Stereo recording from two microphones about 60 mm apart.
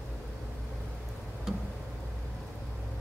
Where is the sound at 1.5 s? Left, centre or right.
Centre.